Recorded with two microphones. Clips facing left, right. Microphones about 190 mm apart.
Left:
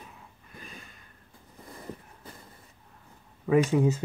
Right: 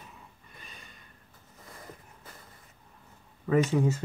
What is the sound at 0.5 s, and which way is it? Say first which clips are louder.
Snort: left 6 dB; centre (ahead or behind).